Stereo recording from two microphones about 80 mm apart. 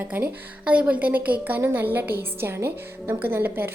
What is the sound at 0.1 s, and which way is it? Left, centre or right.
A woman's voice, centre.